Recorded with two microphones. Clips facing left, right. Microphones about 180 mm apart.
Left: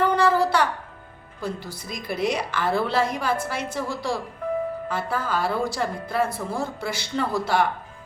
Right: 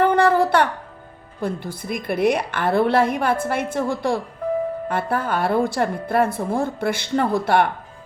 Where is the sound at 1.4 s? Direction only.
55° right (ahead or behind).